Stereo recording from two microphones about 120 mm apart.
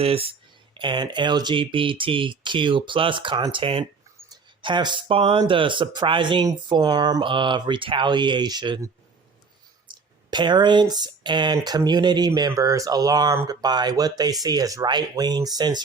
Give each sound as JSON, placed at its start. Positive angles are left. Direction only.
{"t": 0.0, "sound": "speech", "side_deg": -55}
{"t": 0.7, "sound": "speech", "side_deg": -40}
{"t": 4.3, "sound": "speech", "side_deg": -40}
{"t": 9.9, "sound": "speech", "side_deg": -40}